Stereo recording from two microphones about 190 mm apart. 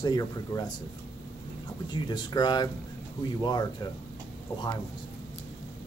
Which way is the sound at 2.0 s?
25° left (ahead or behind).